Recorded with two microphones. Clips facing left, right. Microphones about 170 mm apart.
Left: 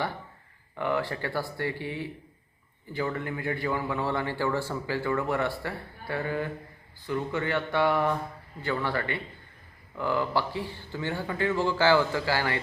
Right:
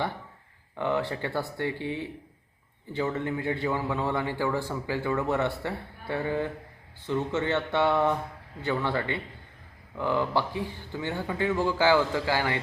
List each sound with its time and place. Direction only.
0.8 s a man's voice: 20° right (ahead or behind)